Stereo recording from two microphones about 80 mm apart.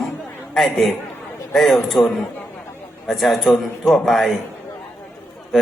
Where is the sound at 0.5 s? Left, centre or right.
Centre.